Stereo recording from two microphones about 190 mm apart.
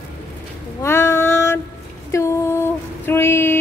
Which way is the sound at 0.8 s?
15° left (ahead or behind).